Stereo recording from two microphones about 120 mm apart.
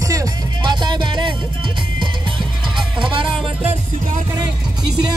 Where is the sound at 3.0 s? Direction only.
45° right (ahead or behind).